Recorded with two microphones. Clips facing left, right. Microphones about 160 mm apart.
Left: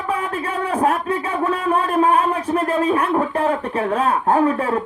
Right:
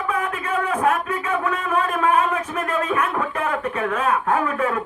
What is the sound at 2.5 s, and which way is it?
Speech, 30° left (ahead or behind).